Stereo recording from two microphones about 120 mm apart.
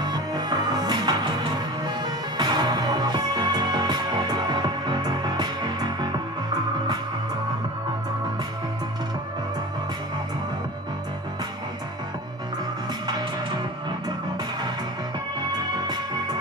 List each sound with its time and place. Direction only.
0.0 s music: 35° right (ahead or behind)